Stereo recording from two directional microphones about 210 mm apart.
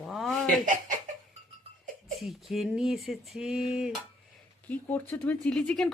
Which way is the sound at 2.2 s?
Centre (ahead or behind).